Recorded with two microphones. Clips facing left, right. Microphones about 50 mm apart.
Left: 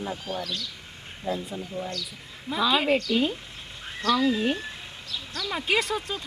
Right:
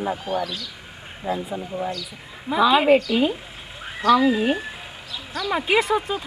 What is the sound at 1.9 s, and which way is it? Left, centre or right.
Speech, centre.